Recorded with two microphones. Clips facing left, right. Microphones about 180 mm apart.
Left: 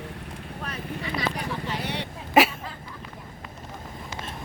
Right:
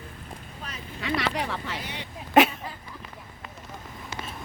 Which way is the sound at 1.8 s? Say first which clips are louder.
Left 6 dB; 65° left (ahead or behind).